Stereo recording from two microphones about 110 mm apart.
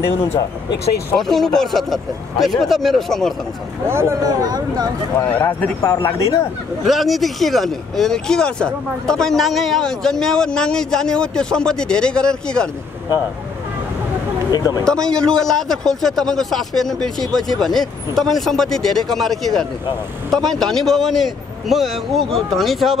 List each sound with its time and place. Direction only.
1.1 s speech: 5° left (ahead or behind)
3.8 s speech: 25° right (ahead or behind)
5.2 s speech: 20° left (ahead or behind)
6.9 s speech: centre (ahead or behind)
14.5 s speech: 35° left (ahead or behind)
14.9 s speech: 5° left (ahead or behind)